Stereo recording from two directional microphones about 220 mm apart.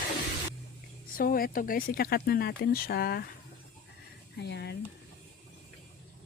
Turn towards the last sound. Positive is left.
turn(degrees=50)  # may be behind; listen again after turning